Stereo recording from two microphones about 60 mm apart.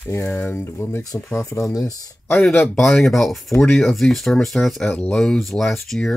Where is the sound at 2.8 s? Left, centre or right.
Centre.